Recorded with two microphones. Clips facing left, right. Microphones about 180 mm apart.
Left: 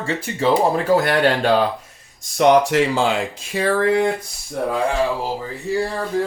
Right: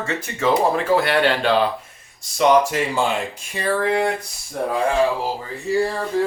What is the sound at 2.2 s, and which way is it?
Speech, 60° left (ahead or behind).